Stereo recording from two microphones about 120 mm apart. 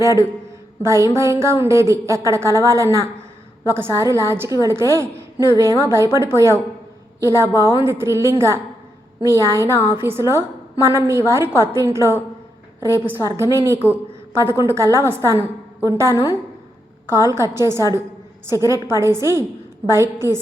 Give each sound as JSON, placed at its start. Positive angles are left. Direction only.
{"t": 0.0, "sound": "a woman's voice", "side_deg": -25}
{"t": 13.8, "sound": "a sound", "side_deg": -20}
{"t": 14.6, "sound": "a woman's voice", "side_deg": -20}
{"t": 17.3, "sound": "a woman's voice", "side_deg": -20}